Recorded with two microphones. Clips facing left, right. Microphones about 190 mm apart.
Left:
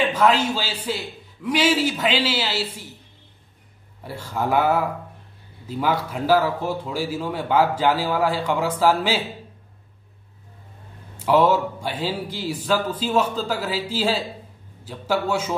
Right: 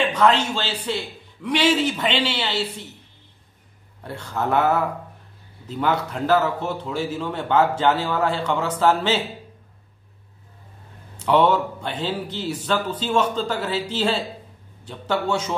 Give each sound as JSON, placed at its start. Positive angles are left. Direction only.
{"t": 0.1, "sound": "a man's voice", "side_deg": 5}
{"t": 4.0, "sound": "a man's voice", "side_deg": 5}
{"t": 11.1, "sound": "a man's voice", "side_deg": 5}